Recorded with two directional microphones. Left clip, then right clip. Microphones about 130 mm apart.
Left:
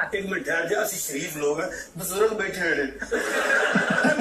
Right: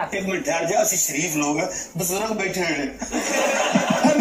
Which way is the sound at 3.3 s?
20° right (ahead or behind).